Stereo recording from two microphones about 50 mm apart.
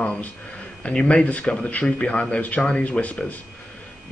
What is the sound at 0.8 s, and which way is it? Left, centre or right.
Speech, left.